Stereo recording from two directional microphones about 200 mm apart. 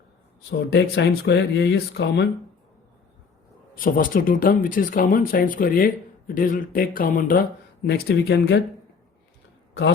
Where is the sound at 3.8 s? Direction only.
45° left (ahead or behind).